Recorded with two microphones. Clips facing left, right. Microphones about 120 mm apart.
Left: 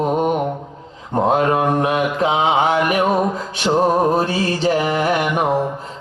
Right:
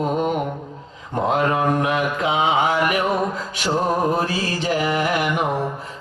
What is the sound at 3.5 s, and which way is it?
Music, 25° left (ahead or behind).